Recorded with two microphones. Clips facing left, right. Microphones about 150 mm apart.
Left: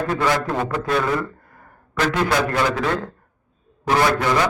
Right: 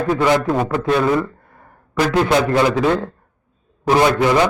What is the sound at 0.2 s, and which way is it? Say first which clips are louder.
Speech: right 5 dB; 15° right (ahead or behind).